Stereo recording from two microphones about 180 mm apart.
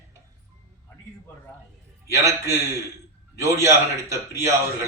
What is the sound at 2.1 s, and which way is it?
Speech, 15° right (ahead or behind).